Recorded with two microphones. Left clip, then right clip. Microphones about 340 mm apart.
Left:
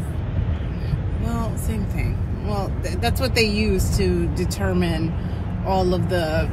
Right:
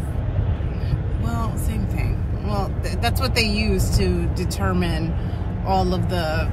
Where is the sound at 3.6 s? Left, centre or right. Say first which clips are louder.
Left 1 dB; centre.